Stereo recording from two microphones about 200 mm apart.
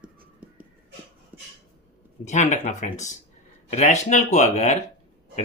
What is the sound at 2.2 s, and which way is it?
Speech, 35° left (ahead or behind).